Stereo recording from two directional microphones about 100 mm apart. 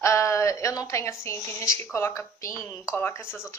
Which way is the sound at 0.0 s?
30° left (ahead or behind).